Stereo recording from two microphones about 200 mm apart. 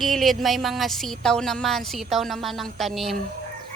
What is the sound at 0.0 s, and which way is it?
Speech, centre (ahead or behind).